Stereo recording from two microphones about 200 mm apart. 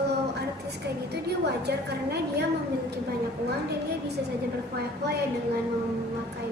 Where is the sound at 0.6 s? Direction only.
55° right (ahead or behind).